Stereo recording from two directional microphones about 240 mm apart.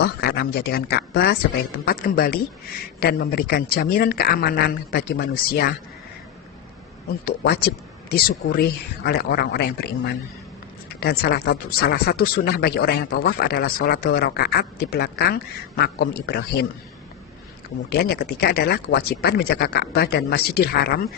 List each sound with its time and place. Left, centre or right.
0.0 s speech: left
7.3 s speech: left
17.8 s speech: left